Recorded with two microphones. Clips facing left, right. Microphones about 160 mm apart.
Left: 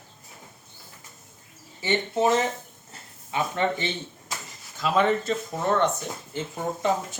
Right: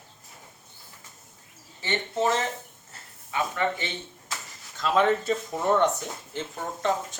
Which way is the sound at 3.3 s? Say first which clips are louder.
Left 2 dB; 25° left (ahead or behind).